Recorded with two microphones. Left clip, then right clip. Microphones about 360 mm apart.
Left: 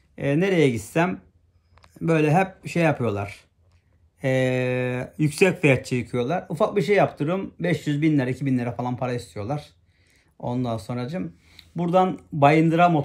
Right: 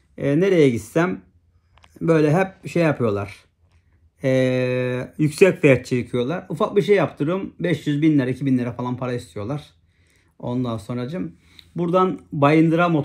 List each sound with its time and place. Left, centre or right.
0.1 s speech: centre